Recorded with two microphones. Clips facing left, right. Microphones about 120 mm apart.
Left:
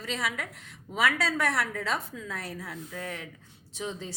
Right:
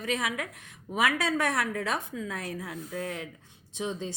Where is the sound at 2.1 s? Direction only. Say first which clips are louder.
Right 3 dB; 15° right (ahead or behind).